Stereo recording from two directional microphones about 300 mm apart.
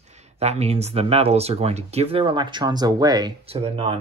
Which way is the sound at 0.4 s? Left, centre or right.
Right.